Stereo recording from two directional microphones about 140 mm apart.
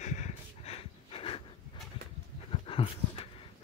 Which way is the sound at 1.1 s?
40° left (ahead or behind).